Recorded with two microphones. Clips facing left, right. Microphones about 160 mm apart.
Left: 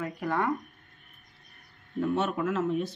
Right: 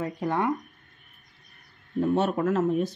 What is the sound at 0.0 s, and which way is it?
Speech, 25° right (ahead or behind).